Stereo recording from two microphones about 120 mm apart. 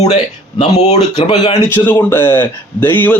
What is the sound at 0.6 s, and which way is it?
Speech, 65° left (ahead or behind).